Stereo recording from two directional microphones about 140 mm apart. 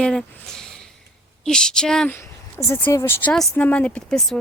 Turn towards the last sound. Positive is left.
turn(degrees=10)  # may be behind; listen again after turning